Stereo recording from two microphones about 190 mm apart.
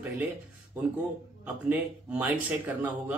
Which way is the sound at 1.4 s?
10° right (ahead or behind).